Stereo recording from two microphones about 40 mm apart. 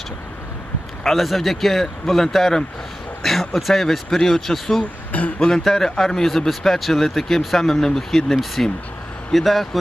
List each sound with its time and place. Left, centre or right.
1.0 s speech: centre
5.1 s speech: left
5.6 s speech: centre